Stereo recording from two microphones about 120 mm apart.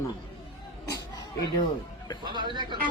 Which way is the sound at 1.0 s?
35° left (ahead or behind).